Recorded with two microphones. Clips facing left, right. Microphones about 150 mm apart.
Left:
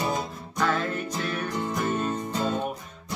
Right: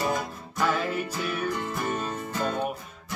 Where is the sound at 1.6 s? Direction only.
20° left (ahead or behind).